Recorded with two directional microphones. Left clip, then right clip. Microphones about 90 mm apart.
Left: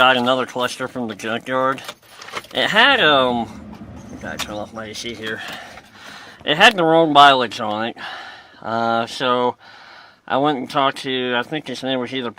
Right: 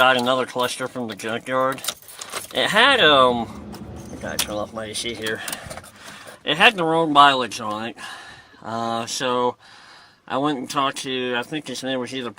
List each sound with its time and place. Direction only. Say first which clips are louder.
0.0 s speech: left 2 dB; 20° left (ahead or behind)
4.2 s speech: right 1 dB; centre (ahead or behind)
6.4 s speech: left 3 dB; 30° left (ahead or behind)